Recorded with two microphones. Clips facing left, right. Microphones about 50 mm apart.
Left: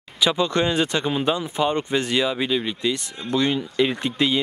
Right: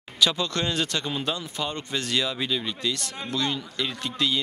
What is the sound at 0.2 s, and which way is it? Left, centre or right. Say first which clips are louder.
Speech: left 4 dB; centre.